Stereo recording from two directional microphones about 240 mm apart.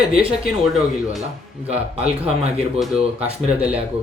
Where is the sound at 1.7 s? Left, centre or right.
Right.